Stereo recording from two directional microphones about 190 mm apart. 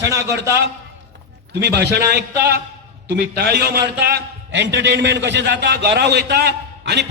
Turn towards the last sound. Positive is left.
turn(degrees=-60)  # may be behind; listen again after turning